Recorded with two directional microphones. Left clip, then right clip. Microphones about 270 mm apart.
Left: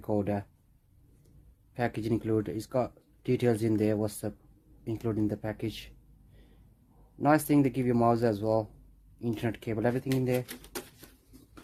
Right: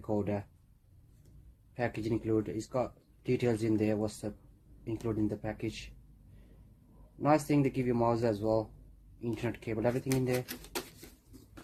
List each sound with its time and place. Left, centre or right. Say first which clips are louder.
0.1 s speech: left 3 dB; left
1.7 s speech: left 3 dB; left
7.2 s speech: left 3 dB; left